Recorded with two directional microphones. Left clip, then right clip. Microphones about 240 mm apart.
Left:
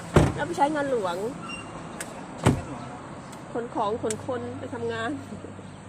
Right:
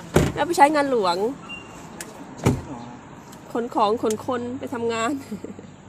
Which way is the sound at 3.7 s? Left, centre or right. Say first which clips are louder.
Right 7 dB; right.